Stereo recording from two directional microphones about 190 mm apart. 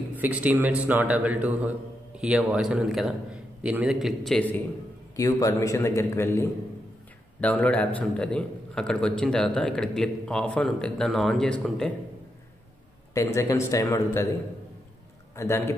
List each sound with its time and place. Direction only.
0.1 s a man's voice: 10° right (ahead or behind)
5.1 s a man's voice: 15° left (ahead or behind); by 11.9 s centre (ahead or behind)
13.1 s a man's voice: 15° left (ahead or behind)
15.3 s a man's voice: 15° left (ahead or behind)